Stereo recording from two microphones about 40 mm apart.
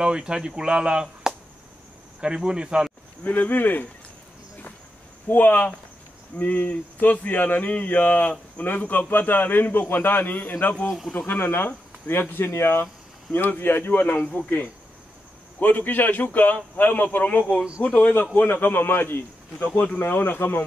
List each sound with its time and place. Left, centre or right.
0.0 s speech: right
3.3 s a man's voice: left
5.3 s a man's voice: left
12.1 s speech: left
13.5 s a man's voice: left
14.2 s a man's voice: left
17.9 s a man's voice: left
19.6 s a man's voice: left